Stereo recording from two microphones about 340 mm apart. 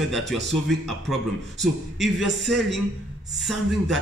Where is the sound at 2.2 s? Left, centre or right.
Left.